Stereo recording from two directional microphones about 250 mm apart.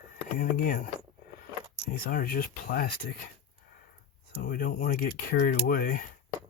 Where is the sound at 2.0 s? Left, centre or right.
Left.